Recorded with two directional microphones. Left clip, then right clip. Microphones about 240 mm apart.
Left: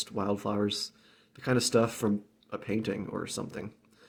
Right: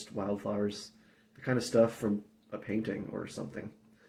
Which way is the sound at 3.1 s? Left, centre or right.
Left.